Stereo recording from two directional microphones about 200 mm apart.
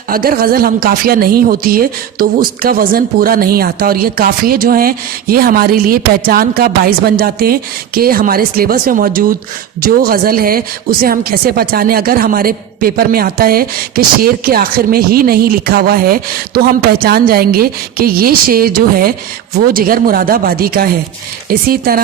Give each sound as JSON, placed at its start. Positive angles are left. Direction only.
{"t": 0.1, "sound": "a woman's voice", "side_deg": -45}